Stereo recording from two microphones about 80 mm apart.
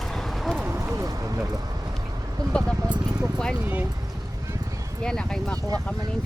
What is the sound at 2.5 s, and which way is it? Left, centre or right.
Speech, centre.